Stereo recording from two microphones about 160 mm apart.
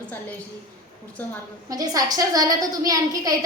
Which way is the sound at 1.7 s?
25° right (ahead or behind).